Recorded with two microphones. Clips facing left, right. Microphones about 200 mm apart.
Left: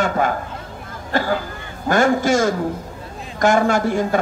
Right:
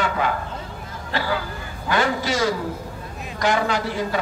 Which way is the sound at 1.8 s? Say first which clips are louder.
Left 6 dB; 45° left (ahead or behind).